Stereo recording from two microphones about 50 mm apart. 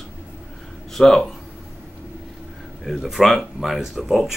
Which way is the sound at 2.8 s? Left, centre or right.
Centre.